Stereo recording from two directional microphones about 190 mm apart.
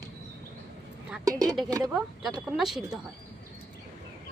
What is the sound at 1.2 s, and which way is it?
Speech, 20° right (ahead or behind).